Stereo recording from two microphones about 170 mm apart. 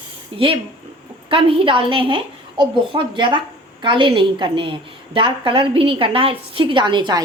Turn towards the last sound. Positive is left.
turn(degrees=-25)  # may be behind; listen again after turning